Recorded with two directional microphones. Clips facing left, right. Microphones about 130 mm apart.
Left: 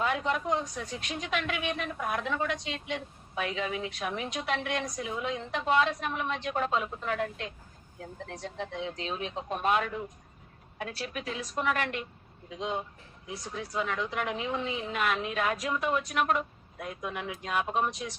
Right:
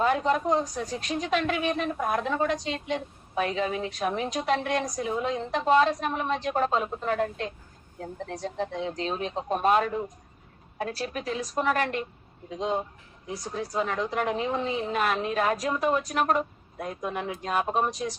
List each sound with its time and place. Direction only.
0.0 s a woman's voice: 35° right (ahead or behind)